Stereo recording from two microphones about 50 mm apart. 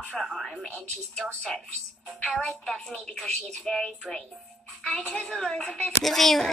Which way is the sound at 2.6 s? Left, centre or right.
Centre.